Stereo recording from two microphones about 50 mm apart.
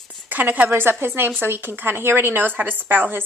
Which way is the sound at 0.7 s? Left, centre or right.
Right.